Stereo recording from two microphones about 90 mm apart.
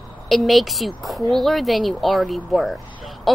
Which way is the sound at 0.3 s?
Centre (ahead or behind).